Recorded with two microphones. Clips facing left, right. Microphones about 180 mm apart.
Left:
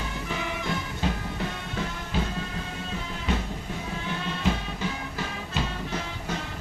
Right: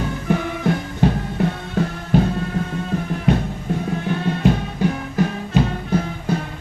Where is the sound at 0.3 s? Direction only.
55° right (ahead or behind).